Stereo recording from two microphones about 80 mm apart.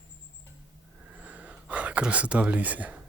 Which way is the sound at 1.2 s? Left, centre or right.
Centre.